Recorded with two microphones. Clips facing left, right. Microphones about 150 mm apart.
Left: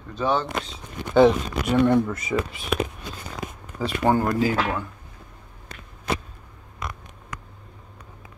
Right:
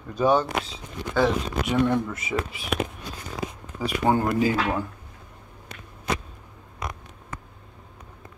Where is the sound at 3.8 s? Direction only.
15° right (ahead or behind).